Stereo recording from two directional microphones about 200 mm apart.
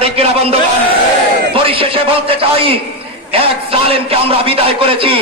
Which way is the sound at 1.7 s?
25° right (ahead or behind).